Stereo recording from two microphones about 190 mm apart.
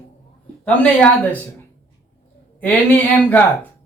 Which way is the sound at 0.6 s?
5° left (ahead or behind).